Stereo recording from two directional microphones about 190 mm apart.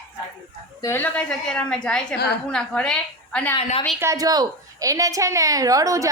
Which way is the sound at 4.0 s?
15° right (ahead or behind).